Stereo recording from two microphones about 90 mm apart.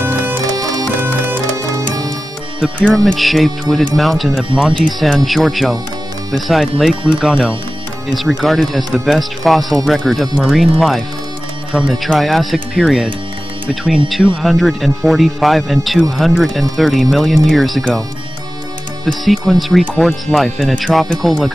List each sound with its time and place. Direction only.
0.0 s music: 25° right (ahead or behind)
1.6 s music: 40° right (ahead or behind)
2.8 s speech: 10° left (ahead or behind)
19.0 s speech: 5° left (ahead or behind)